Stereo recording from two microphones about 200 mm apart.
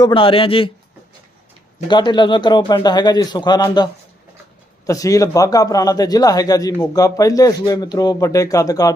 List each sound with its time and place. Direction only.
0.0 s a man's voice: 25° left (ahead or behind)
1.9 s a man's voice: 20° left (ahead or behind)
4.9 s speech: 15° left (ahead or behind)